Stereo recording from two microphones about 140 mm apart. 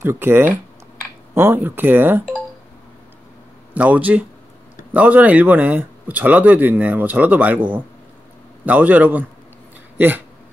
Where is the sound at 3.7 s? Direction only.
10° right (ahead or behind).